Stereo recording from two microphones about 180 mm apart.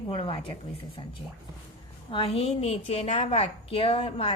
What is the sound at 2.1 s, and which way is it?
A woman's voice, 30° left (ahead or behind).